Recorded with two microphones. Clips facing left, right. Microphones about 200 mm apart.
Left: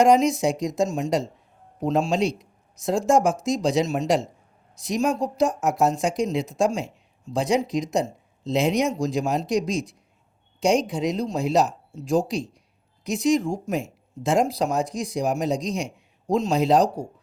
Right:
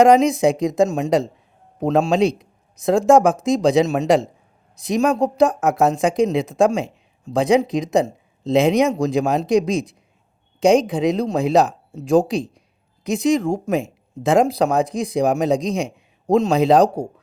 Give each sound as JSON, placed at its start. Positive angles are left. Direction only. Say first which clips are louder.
{"t": 0.0, "sound": "speech", "louder": "right 5 dB", "side_deg": -55}